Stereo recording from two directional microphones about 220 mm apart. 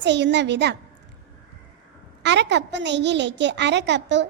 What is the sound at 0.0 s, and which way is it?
Speech, 50° right (ahead or behind).